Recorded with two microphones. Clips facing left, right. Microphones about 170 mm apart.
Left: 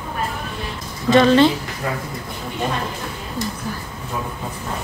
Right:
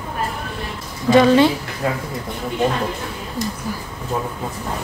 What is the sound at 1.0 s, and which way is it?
Speech, 10° right (ahead or behind).